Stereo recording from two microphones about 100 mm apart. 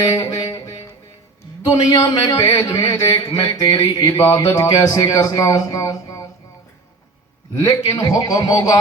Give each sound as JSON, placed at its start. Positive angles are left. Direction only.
{"t": 0.0, "sound": "music", "side_deg": 35}
{"t": 1.6, "sound": "speech", "side_deg": 35}
{"t": 7.6, "sound": "speech", "side_deg": 35}